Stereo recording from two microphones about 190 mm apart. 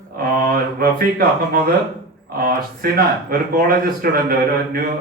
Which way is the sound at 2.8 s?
55° right (ahead or behind).